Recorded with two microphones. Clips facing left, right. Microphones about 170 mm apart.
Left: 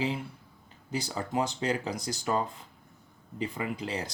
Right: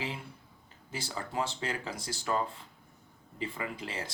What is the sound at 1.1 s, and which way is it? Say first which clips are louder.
Speech: left 3 dB; 20° left (ahead or behind).